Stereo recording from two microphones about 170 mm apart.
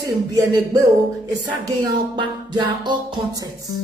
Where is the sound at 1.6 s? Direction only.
25° right (ahead or behind).